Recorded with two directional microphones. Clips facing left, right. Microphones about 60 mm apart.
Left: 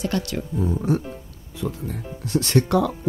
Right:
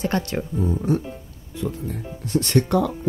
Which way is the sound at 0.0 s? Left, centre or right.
Right.